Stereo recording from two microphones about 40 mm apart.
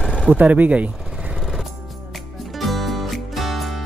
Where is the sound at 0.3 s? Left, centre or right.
Right.